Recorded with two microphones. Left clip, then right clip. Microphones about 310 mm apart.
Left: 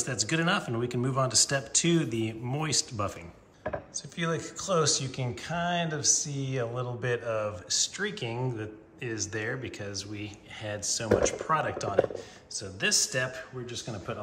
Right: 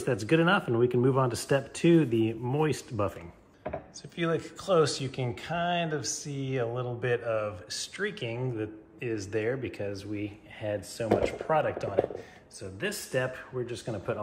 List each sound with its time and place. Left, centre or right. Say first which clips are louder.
0.0 s speech: right 3 dB; centre